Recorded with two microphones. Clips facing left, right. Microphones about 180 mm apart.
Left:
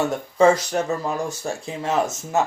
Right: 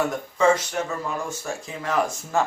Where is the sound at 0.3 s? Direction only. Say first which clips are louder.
Left 4 dB; 35° left (ahead or behind).